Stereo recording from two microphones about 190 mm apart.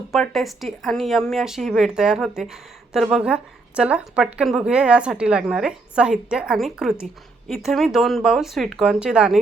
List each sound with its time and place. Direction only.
0.1 s speech: centre (ahead or behind)